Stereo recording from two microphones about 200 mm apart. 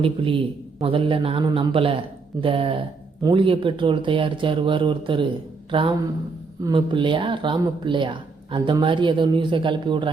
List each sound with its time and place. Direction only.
0.0 s speech: 25° right (ahead or behind)
6.6 s speech: 20° right (ahead or behind)